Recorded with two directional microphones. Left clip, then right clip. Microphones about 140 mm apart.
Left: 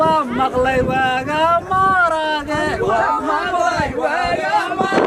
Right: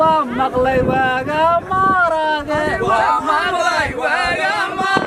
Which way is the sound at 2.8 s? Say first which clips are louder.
Right 2 dB; 35° right (ahead or behind).